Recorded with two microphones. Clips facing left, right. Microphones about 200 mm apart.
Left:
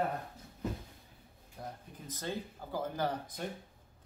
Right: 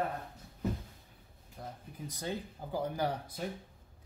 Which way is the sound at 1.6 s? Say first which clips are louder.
Left 1 dB; centre (ahead or behind).